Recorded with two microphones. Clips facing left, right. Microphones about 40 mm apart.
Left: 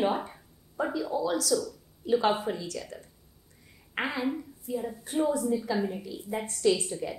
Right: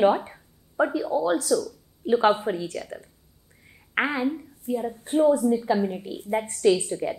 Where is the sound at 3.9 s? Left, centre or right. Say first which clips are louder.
Right 6 dB; right.